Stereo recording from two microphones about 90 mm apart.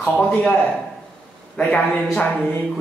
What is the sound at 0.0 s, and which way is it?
Speech, 10° left (ahead or behind).